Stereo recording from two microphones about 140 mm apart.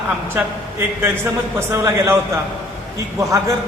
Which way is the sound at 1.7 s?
20° right (ahead or behind).